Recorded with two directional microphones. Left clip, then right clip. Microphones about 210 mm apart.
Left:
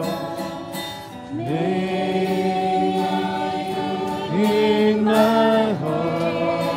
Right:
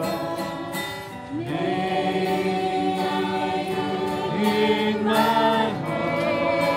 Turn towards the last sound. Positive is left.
turn(degrees=15)  # may be behind; listen again after turning